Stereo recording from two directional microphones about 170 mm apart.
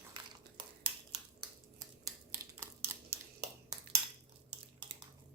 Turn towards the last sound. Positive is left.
turn(degrees=-20)  # may be behind; listen again after turning